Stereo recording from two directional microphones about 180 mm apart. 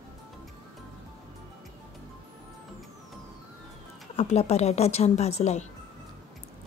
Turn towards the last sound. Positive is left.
turn(degrees=35)  # may be behind; listen again after turning